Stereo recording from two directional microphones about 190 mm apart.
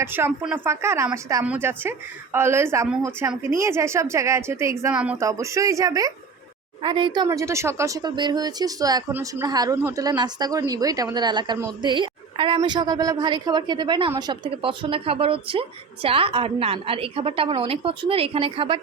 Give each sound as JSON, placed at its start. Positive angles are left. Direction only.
{"t": 0.0, "sound": "a woman's voice", "side_deg": -10}